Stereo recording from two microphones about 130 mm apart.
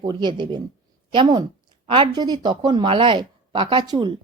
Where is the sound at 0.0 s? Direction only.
35° right (ahead or behind).